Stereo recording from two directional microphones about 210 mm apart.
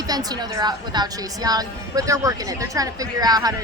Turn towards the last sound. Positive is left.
turn(degrees=-20)  # may be behind; listen again after turning